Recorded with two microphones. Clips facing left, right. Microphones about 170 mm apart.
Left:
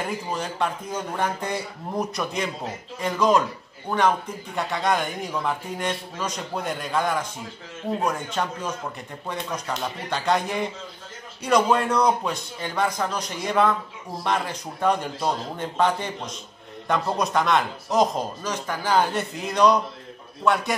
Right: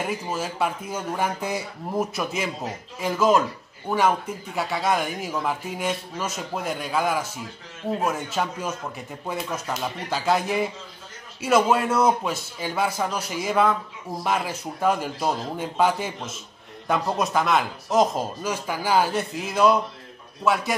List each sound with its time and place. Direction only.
0.0 s a man's voice: 5° right (ahead or behind)